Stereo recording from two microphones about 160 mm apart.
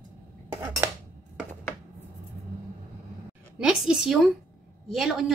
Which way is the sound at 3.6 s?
5° right (ahead or behind).